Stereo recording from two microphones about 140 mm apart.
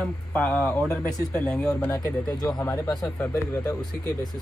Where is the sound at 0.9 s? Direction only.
20° left (ahead or behind).